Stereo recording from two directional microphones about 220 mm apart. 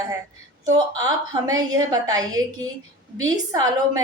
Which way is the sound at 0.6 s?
15° right (ahead or behind).